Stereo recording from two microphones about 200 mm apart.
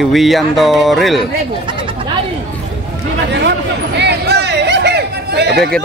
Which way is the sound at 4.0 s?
55° right (ahead or behind).